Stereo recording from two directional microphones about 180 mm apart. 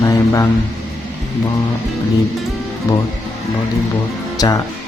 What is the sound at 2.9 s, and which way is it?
Speech, 20° left (ahead or behind).